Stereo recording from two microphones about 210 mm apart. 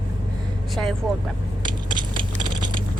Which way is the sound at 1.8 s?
20° right (ahead or behind).